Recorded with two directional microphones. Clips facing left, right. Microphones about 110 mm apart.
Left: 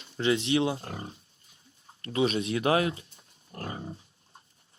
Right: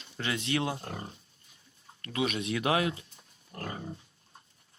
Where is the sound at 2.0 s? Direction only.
30° left (ahead or behind).